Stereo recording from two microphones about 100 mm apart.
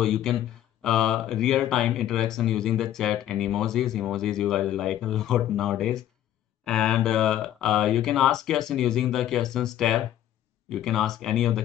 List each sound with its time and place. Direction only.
0.0 s speech: 5° left (ahead or behind)